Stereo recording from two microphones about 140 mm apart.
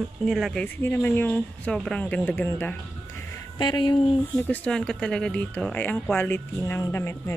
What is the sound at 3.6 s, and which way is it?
Speech, 30° left (ahead or behind).